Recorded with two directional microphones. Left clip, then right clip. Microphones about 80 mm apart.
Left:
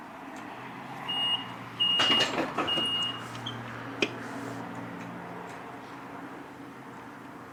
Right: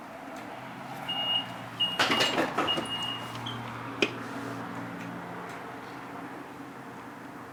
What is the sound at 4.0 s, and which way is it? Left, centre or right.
Finger snapping, centre.